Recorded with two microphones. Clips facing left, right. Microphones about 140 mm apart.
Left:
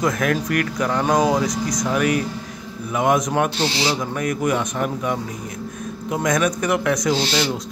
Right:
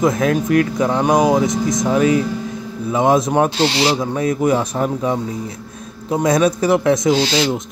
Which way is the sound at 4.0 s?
25° right (ahead or behind).